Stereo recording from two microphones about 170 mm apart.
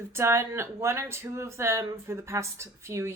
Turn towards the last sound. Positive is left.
turn(degrees=-15)  # may be behind; listen again after turning